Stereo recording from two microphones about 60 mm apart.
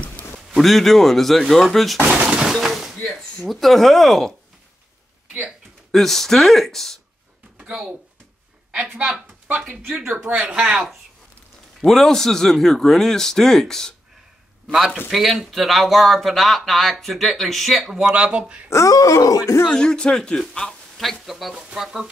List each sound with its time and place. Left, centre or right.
0.6 s speech: centre
2.2 s breaking: centre
2.5 s a sound: centre
3.2 s speech: centre
5.9 s speech: centre
8.9 s speech: centre
9.9 s speech: right
11.8 s speech: centre
15.0 s speech: centre
18.1 s speech: centre
18.7 s speech: left
18.9 s speech: left
19.7 s speech: centre